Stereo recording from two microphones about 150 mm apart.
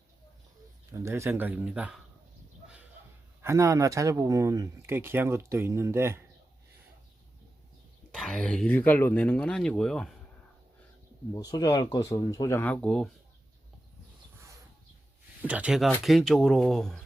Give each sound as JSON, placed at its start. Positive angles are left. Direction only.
{"t": 0.9, "sound": "speech", "side_deg": -20}
{"t": 3.4, "sound": "speech", "side_deg": -20}
{"t": 8.1, "sound": "speech", "side_deg": 5}
{"t": 11.3, "sound": "speech", "side_deg": 25}
{"t": 15.4, "sound": "speech", "side_deg": -10}